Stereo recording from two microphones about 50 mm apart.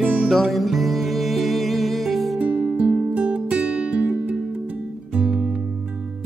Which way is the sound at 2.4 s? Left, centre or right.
Right.